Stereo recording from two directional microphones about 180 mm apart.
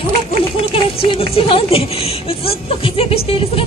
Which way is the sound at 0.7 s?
30° left (ahead or behind).